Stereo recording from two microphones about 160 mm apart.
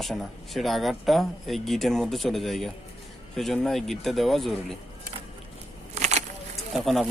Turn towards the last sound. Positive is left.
turn(degrees=0)  # may be behind; listen again after turning